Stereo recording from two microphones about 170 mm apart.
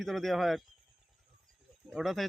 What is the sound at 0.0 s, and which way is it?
Speech, centre (ahead or behind).